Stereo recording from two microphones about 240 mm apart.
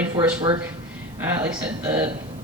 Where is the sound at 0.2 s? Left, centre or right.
Centre.